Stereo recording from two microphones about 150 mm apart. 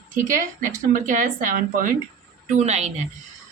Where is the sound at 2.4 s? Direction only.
50° right (ahead or behind).